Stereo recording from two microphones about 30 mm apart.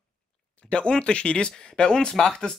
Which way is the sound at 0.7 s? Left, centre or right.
Left.